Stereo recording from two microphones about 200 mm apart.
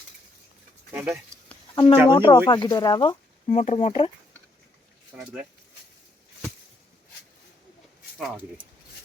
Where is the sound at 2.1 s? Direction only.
20° left (ahead or behind).